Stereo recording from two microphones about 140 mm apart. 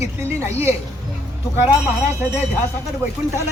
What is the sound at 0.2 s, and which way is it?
Speech, 20° right (ahead or behind).